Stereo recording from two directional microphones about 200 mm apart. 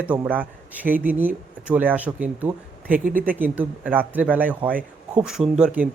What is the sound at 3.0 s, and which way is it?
Speech, 45° right (ahead or behind).